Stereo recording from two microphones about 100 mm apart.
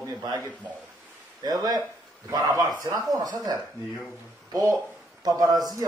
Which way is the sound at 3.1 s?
45° right (ahead or behind).